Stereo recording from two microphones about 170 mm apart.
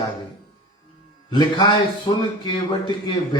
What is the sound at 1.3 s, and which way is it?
A man's voice, 25° left (ahead or behind).